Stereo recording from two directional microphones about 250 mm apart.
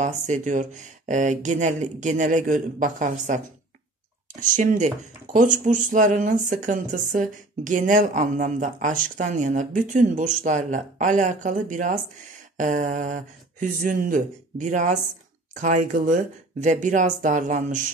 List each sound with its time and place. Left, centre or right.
0.0 s speech: right